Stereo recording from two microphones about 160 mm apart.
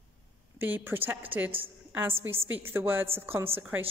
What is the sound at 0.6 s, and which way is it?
A woman's voice, 10° right (ahead or behind).